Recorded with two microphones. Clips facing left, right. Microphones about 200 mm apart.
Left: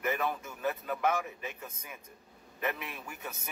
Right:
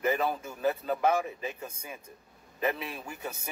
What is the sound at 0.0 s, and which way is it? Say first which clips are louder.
A man's voice: right 4 dB; 30° right (ahead or behind).